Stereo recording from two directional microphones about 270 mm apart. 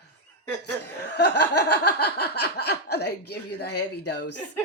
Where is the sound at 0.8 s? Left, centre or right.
Left.